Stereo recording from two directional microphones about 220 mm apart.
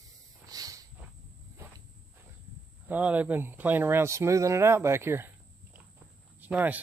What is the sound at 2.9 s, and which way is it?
Speech, 5° right (ahead or behind).